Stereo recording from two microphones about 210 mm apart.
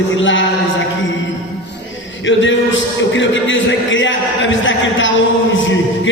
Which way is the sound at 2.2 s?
65° left (ahead or behind).